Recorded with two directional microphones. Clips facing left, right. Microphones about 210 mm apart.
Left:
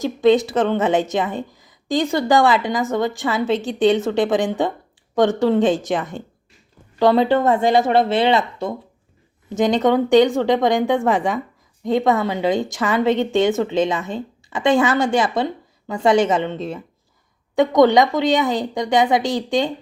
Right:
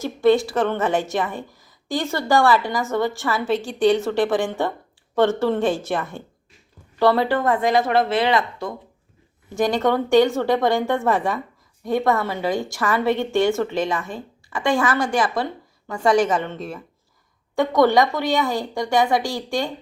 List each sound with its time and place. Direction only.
0.0 s a woman's voice: 20° left (ahead or behind)